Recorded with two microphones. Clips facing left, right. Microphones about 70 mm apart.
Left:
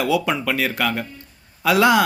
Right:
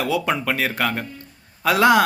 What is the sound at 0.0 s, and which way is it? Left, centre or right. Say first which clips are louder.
A man's voice: left 1 dB; right.